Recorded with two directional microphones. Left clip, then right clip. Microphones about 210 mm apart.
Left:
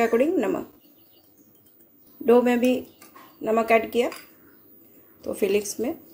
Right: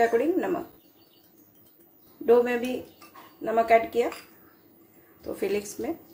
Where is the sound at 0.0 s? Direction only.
30° left (ahead or behind).